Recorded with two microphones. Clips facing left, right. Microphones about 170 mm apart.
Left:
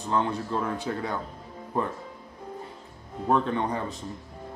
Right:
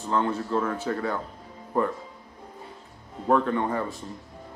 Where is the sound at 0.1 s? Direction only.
15° left (ahead or behind).